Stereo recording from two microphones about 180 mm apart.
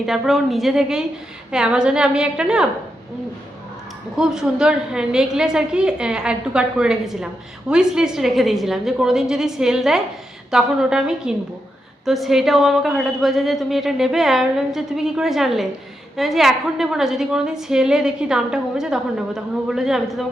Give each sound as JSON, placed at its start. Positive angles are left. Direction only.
{"t": 0.0, "sound": "a woman's voice", "side_deg": 0}
{"t": 4.2, "sound": "a woman's voice", "side_deg": -5}